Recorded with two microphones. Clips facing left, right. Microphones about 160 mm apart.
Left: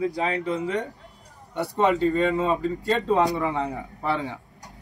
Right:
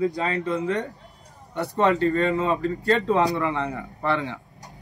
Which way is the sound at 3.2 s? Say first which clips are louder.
Even; 5° left (ahead or behind).